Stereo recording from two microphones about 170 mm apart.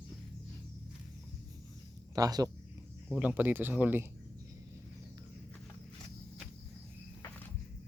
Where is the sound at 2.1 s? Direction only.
20° right (ahead or behind).